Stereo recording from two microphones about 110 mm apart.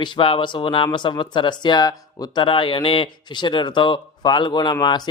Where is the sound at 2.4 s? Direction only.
50° left (ahead or behind).